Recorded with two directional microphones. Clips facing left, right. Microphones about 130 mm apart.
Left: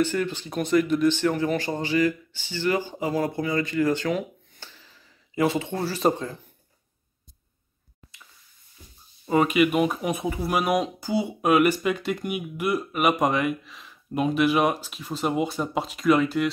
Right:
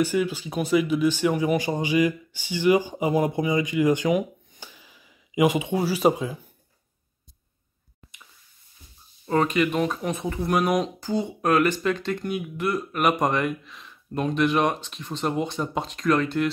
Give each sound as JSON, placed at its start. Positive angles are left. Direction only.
{"t": 0.0, "sound": "speech", "side_deg": -10}
{"t": 9.2, "sound": "speech", "side_deg": 10}